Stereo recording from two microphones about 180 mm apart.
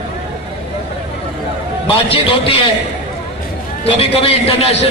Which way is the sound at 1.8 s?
30° left (ahead or behind).